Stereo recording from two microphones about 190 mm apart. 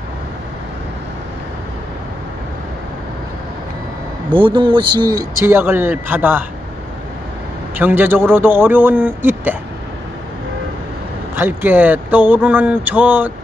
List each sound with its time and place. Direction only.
4.3 s speech: 25° right (ahead or behind)
5.4 s speech: 10° right (ahead or behind)
7.7 s speech: 10° right (ahead or behind)
11.3 s speech: 10° right (ahead or behind)